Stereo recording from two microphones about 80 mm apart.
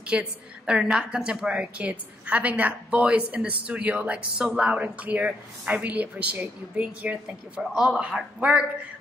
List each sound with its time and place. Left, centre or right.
0.0 s a woman's voice: centre